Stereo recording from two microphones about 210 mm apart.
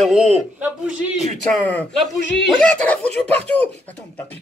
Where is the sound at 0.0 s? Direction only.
Centre (ahead or behind).